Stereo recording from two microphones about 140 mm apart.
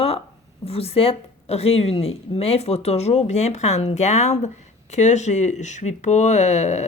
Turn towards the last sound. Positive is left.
turn(degrees=55)  # may be behind; listen again after turning